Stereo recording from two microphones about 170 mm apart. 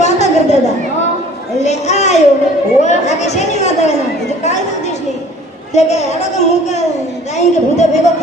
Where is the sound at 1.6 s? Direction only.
40° left (ahead or behind).